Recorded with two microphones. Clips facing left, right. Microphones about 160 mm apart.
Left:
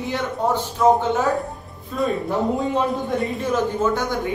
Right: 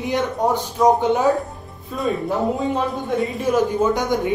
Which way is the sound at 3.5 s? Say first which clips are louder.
Right 3 dB; 15° right (ahead or behind).